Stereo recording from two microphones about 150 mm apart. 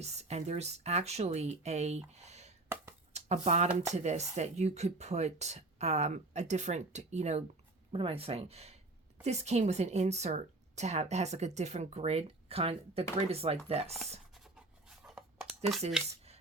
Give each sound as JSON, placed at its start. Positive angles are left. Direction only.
{"t": 0.0, "sound": "a woman's voice", "side_deg": -45}
{"t": 2.2, "sound": "a sound", "side_deg": -50}
{"t": 3.1, "sound": "a woman's voice", "side_deg": -45}
{"t": 7.9, "sound": "a woman's voice", "side_deg": -35}
{"t": 14.3, "sound": "writing", "side_deg": 0}